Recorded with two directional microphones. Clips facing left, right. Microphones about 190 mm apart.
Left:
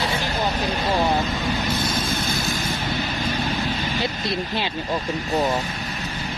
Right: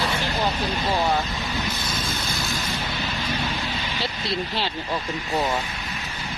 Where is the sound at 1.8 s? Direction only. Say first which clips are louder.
Left 5 dB; 50° left (ahead or behind).